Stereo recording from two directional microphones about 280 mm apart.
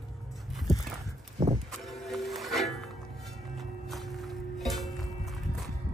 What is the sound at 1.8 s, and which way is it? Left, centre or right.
Music, centre.